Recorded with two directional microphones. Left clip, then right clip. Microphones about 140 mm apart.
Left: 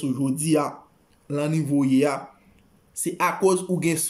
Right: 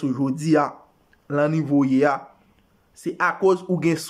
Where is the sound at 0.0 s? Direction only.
15° left (ahead or behind).